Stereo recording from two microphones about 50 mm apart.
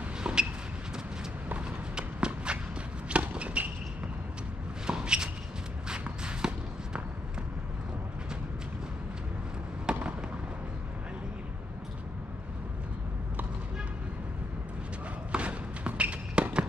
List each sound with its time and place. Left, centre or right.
0.2 s a sound: centre
1.6 s walk: centre
3.1 s a sound: right
4.8 s shuffle: centre
5.9 s walk: centre
9.9 s fireworks: centre
15.3 s basketball bounce: right